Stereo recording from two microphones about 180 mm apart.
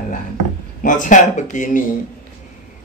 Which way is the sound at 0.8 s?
45° left (ahead or behind).